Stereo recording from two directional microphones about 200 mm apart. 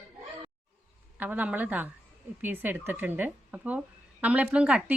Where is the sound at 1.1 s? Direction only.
5° right (ahead or behind).